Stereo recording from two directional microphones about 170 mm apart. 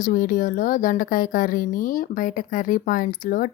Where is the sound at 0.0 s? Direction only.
55° left (ahead or behind).